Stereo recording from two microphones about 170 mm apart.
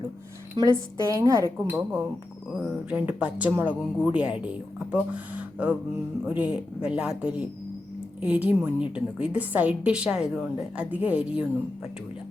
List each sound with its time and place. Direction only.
0.5 s a woman's voice: 20° right (ahead or behind)